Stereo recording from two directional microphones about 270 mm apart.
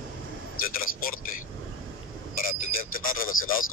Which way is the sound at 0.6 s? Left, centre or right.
Left.